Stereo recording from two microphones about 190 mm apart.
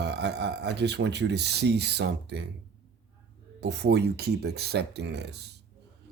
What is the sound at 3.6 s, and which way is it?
A man's voice, 60° right (ahead or behind).